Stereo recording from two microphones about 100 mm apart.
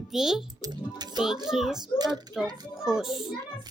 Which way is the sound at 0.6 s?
45° right (ahead or behind).